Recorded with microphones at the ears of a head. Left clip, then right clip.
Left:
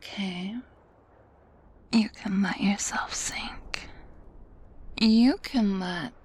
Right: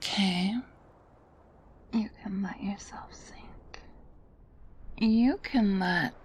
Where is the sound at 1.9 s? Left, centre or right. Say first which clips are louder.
Left 7 dB; left.